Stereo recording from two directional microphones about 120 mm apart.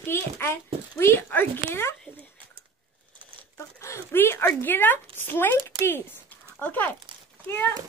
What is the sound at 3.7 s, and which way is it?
Speech, 25° left (ahead or behind).